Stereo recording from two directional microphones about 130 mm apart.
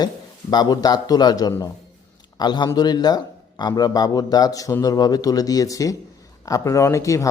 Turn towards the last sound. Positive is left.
turn(degrees=25)  # may be behind; listen again after turning